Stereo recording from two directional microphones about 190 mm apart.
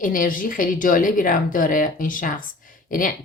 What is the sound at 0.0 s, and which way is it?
Speech, 45° left (ahead or behind).